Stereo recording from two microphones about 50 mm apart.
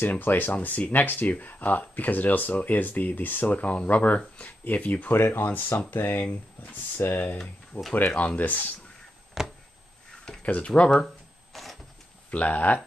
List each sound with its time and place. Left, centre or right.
0.1 s speech: left
5.1 s speech: left
7.0 s speech: left
7.9 s speech: left
9.4 s a sound: centre
10.4 s speech: left
11.5 s vehicle: centre
12.3 s speech: left